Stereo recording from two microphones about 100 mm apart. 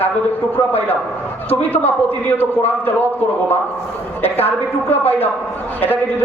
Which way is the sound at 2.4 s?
20° left (ahead or behind).